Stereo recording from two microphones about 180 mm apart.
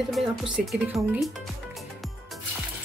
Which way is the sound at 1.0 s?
20° right (ahead or behind).